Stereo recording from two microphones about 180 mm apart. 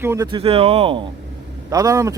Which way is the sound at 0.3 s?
30° right (ahead or behind).